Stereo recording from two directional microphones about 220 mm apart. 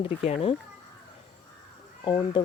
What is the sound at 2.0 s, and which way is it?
Speech, 20° left (ahead or behind).